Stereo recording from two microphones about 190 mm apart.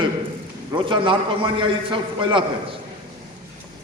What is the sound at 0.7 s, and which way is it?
A man's voice, 25° right (ahead or behind).